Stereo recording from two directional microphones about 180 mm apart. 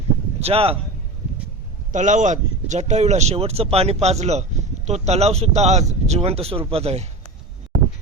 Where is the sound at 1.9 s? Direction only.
45° right (ahead or behind).